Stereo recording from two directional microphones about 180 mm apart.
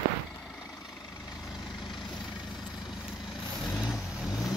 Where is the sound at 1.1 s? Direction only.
15° left (ahead or behind).